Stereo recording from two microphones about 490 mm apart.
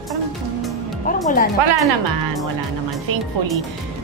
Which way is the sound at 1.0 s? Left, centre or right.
Centre.